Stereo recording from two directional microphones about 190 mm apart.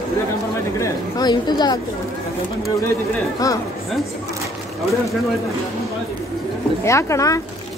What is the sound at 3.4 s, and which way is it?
Speech, 20° left (ahead or behind).